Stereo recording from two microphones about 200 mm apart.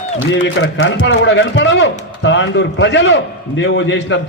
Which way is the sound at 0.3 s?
60° left (ahead or behind).